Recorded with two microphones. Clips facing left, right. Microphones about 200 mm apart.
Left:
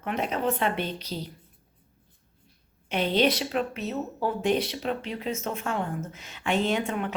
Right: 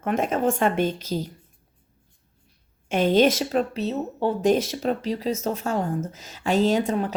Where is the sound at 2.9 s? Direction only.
45° right (ahead or behind).